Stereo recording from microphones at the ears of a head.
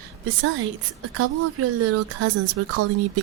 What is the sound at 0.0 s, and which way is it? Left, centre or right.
A woman's voice, right.